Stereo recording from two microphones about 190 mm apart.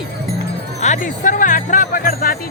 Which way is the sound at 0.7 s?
40° left (ahead or behind).